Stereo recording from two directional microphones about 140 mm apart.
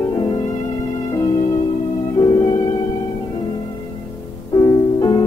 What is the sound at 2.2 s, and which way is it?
Music, 25° left (ahead or behind).